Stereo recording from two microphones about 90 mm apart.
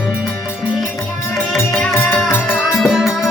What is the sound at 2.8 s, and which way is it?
Music, centre (ahead or behind).